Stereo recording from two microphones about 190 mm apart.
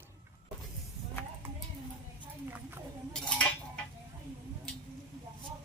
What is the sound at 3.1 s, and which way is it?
Cutlery, 5° left (ahead or behind).